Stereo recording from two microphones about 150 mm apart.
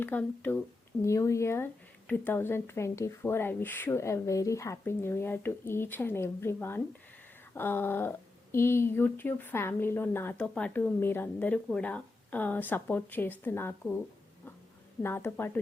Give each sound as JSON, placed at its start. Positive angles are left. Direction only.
{"t": 0.0, "sound": "speech", "side_deg": 10}
{"t": 15.0, "sound": "speech", "side_deg": 15}